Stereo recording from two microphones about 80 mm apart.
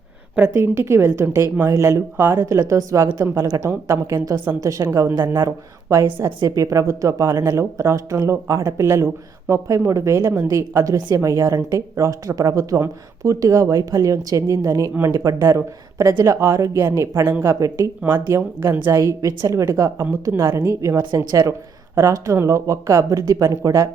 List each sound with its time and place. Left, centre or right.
0.3 s speech: right
2.6 s a woman's voice: right
6.4 s a woman's voice: right
7.6 s a woman's voice: right